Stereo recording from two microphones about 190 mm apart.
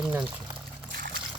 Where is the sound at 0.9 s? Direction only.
60° right (ahead or behind).